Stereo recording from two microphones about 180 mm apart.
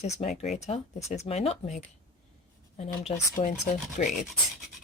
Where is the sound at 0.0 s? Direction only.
40° left (ahead or behind).